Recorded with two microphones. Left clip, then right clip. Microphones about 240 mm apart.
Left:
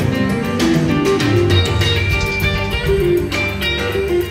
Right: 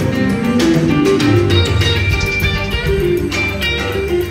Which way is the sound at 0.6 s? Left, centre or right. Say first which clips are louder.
Right 3 dB; left.